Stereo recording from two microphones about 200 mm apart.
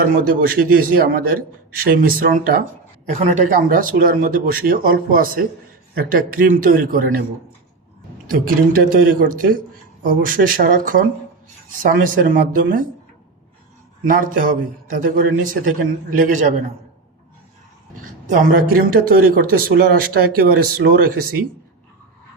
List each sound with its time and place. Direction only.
0.1 s speech: 45° right (ahead or behind)
3.2 s speech: 35° right (ahead or behind)
8.3 s speech: 45° right (ahead or behind)
14.0 s a man's voice: 45° right (ahead or behind)
18.0 s speech: 45° right (ahead or behind)